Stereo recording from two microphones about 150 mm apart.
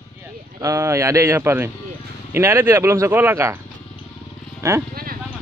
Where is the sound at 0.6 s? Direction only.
20° right (ahead or behind).